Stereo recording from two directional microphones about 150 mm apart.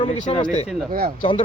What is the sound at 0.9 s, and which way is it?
Speech, 65° right (ahead or behind).